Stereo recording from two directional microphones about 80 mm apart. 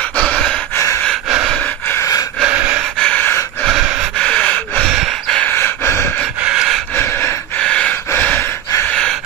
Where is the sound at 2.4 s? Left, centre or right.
Centre.